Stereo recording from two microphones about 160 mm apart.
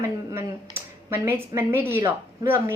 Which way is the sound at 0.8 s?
15° right (ahead or behind).